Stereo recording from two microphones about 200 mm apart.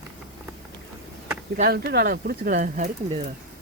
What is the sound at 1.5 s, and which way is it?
Speech, 50° right (ahead or behind).